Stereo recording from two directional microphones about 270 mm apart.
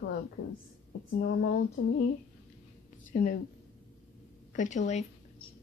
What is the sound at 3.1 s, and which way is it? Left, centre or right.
Speech, left.